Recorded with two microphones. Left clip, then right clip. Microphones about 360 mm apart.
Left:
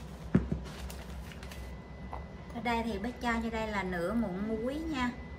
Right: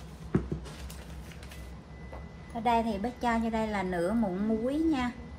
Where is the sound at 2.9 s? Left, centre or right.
Centre.